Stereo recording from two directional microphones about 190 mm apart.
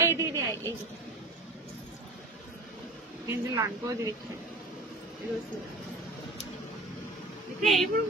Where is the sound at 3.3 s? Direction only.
15° right (ahead or behind).